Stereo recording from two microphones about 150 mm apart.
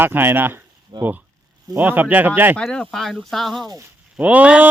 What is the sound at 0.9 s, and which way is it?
Speech, 30° right (ahead or behind).